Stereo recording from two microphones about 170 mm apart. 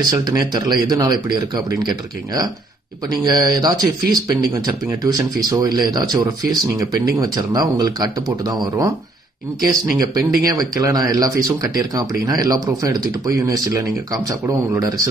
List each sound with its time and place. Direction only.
0.1 s speech: 25° right (ahead or behind)